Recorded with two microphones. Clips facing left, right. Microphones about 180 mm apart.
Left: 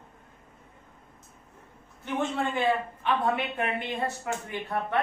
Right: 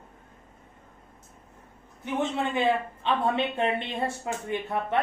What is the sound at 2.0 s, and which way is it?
A woman's voice, 20° right (ahead or behind).